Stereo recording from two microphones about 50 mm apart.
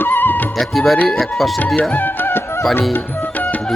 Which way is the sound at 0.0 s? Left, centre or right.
Left.